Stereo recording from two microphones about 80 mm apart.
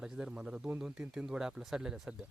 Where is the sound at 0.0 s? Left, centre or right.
Centre.